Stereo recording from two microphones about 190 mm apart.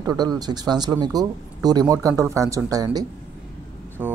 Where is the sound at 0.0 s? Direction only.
20° right (ahead or behind).